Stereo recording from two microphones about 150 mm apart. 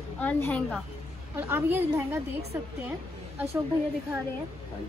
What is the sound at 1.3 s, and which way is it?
Speech, 15° right (ahead or behind).